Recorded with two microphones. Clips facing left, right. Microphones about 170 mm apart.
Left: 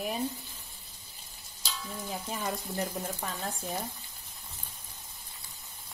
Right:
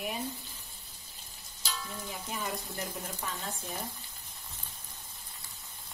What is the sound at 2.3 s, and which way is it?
Speech, 35° left (ahead or behind).